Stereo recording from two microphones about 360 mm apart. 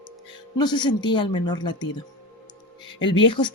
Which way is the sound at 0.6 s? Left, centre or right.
Centre.